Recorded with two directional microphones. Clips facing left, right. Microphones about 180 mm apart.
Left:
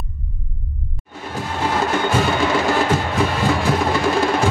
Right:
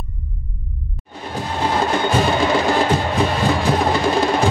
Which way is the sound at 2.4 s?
15° right (ahead or behind).